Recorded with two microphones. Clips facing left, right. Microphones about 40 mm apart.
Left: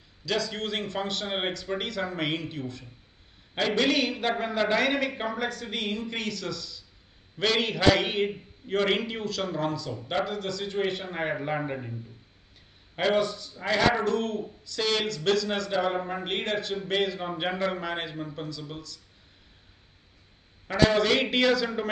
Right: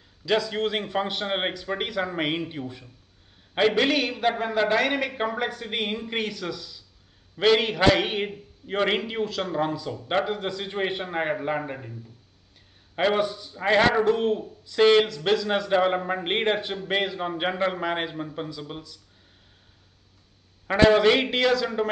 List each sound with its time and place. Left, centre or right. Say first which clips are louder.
0.2 s a man's voice: right 5 dB; centre
11.3 s speech: right 2 dB; centre
12.9 s a man's voice: right 2 dB; centre
15.7 s a man's voice: right 6 dB; right
20.6 s a man's voice: right 5 dB; right
21.3 s speech: right 1 dB; centre